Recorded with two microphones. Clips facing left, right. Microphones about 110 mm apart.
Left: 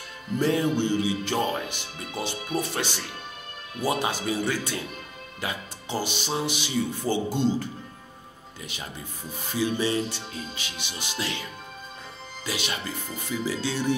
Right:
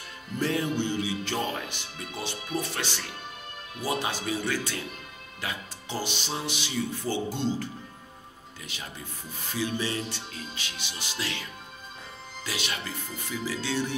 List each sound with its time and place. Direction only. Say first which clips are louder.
0.4 s speech: left 4 dB; 15° left (ahead or behind)
9.5 s speech: left 5 dB; 15° left (ahead or behind)
12.4 s speech: left 3 dB; 20° left (ahead or behind)